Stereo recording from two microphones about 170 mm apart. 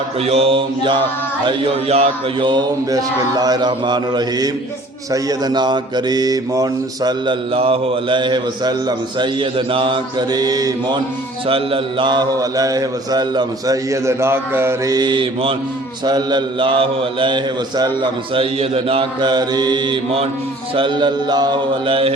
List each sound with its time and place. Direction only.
0.2 s mantra: 35° right (ahead or behind)